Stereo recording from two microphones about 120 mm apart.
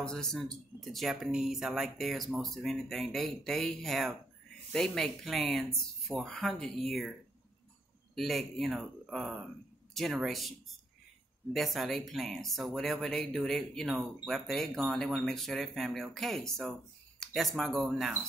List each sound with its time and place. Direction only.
0.0 s speech: 5° left (ahead or behind)
11.5 s speech: centre (ahead or behind)